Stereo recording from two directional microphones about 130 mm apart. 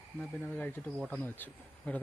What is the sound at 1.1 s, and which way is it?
Speech, 10° left (ahead or behind).